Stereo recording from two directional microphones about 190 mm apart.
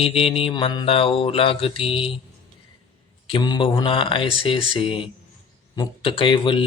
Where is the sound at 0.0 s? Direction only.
30° left (ahead or behind).